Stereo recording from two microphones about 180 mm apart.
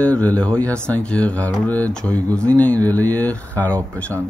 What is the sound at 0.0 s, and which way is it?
Speech, 10° left (ahead or behind).